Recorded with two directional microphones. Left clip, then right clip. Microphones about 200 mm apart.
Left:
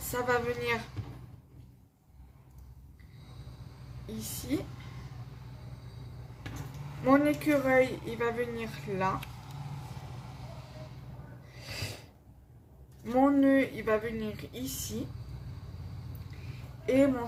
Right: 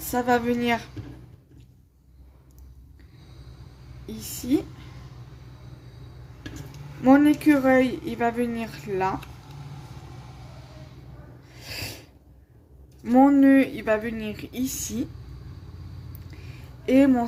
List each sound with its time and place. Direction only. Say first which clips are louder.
0.1 s speech: right 7 dB; 45° right (ahead or behind)
7.0 s speech: right 7 dB; 45° right (ahead or behind)
11.6 s snort: right 5 dB; 45° right (ahead or behind)
13.1 s speech: right 8 dB; 45° right (ahead or behind)
16.8 s speech: right 6 dB; 45° right (ahead or behind)